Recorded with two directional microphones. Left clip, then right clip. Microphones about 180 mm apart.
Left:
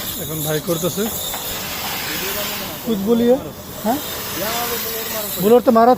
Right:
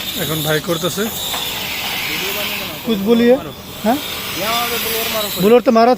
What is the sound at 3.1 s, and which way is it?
Speech, 25° right (ahead or behind).